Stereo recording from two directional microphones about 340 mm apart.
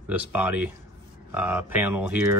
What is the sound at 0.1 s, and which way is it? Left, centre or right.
Speech, centre.